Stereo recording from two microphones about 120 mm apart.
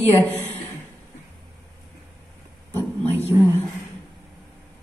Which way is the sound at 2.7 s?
15° left (ahead or behind).